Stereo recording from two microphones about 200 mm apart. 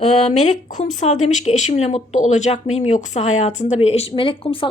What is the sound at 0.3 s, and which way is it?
A woman's voice, 35° left (ahead or behind).